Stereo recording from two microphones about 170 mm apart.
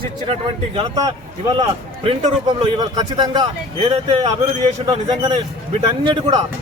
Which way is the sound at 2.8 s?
25° right (ahead or behind).